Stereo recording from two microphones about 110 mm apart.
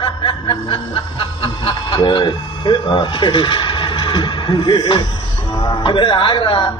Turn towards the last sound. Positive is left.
turn(degrees=50)  # may be behind; listen again after turning